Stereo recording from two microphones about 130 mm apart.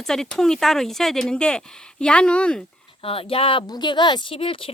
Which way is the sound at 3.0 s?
45° left (ahead or behind).